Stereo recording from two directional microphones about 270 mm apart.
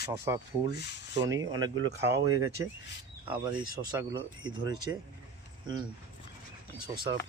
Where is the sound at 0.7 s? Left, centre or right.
Left.